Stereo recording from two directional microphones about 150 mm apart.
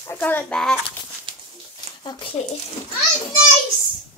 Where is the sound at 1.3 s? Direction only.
35° right (ahead or behind).